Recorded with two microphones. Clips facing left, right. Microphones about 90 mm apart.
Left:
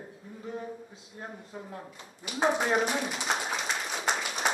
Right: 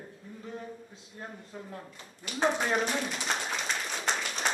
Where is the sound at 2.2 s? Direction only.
10° left (ahead or behind).